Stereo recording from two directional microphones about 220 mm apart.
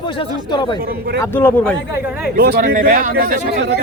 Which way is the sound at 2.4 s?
45° right (ahead or behind).